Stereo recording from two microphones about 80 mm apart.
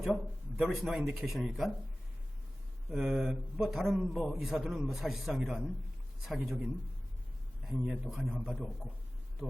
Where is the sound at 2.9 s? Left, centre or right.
Centre.